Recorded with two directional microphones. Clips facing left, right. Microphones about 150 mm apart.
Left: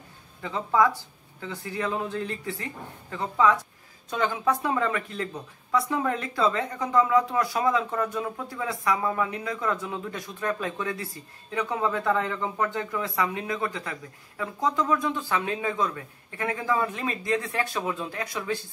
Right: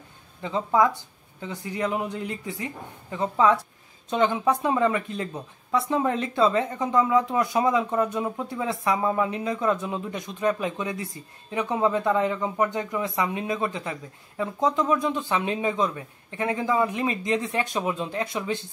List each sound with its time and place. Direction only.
0.4 s speech: 20° right (ahead or behind)